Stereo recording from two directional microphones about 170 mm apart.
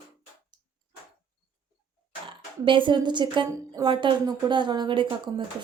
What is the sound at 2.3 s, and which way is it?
A woman's voice, 30° right (ahead or behind).